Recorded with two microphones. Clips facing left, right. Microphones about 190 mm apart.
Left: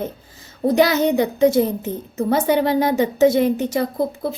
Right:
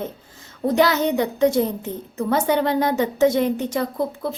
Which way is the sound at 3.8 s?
35° left (ahead or behind).